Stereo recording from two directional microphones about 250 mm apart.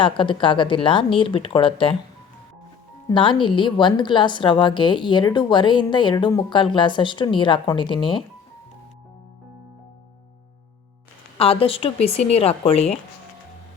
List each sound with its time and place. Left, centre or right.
0.0 s a woman's voice: centre
3.1 s a woman's voice: centre
11.3 s a woman's voice: left